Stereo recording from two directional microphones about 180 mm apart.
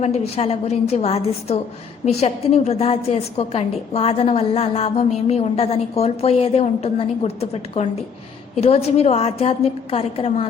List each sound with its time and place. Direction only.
0.0 s a woman's voice: 35° left (ahead or behind)